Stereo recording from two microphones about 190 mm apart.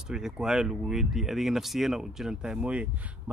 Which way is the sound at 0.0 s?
5° right (ahead or behind).